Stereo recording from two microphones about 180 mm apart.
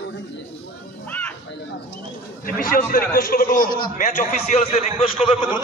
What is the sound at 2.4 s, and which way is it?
A man's voice, 50° left (ahead or behind).